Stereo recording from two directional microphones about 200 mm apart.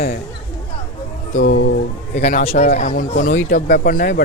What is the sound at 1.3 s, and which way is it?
Speech, 40° left (ahead or behind).